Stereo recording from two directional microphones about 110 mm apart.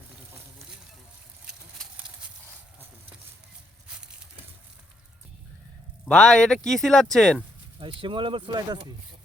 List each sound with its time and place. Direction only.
2.0 s horse: 10° right (ahead or behind)
3.8 s a sound: 5° right (ahead or behind)
6.1 s speech: 5° left (ahead or behind)
7.8 s speech: 50° right (ahead or behind)